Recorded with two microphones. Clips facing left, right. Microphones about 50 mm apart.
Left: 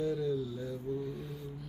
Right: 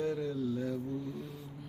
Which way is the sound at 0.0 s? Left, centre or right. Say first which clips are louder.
Left 1 dB; right.